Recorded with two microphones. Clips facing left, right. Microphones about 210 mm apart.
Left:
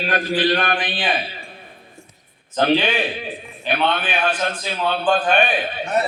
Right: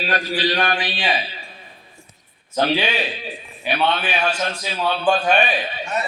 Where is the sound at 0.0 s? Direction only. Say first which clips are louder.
Left 2 dB; 50° left (ahead or behind).